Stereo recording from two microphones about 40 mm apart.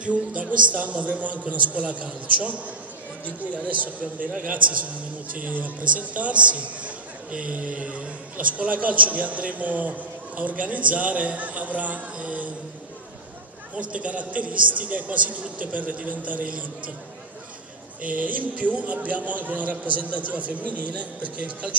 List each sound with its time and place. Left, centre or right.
0.0 s a man's voice: right
5.4 s a man's voice: right
8.5 s a man's voice: right
13.7 s a man's voice: right
18.2 s a man's voice: right